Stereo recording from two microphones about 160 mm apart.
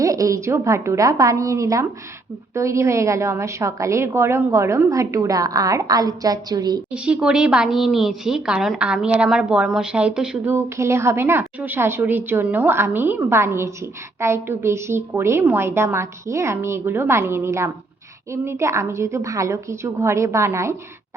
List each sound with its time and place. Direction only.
0.0 s a woman's voice: 20° right (ahead or behind)
6.9 s a woman's voice: 5° right (ahead or behind)